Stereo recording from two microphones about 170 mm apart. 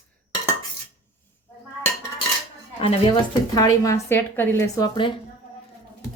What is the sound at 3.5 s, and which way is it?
Speech, 20° left (ahead or behind).